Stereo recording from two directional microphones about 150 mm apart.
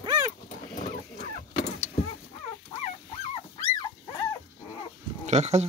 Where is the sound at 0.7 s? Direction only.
60° left (ahead or behind).